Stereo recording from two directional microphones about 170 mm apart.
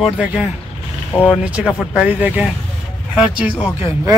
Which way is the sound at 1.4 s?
5° right (ahead or behind).